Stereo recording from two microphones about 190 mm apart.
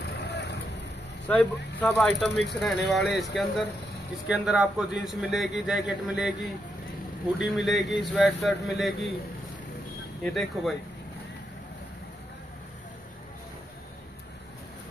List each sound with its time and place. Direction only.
0.2 s vehicle: 60° left (ahead or behind)
1.2 s a man's voice: 10° left (ahead or behind)
7.4 s a man's voice: centre (ahead or behind)
10.2 s a man's voice: centre (ahead or behind)